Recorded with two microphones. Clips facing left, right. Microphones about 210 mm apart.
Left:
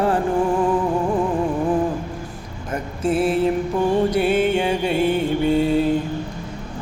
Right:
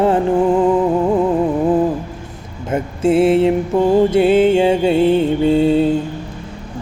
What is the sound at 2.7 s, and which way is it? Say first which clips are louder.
Music: right 7 dB; 25° right (ahead or behind).